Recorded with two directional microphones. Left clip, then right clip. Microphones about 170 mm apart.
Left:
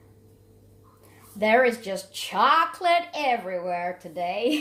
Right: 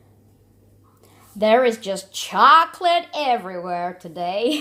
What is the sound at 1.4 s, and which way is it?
A woman's voice, 40° right (ahead or behind).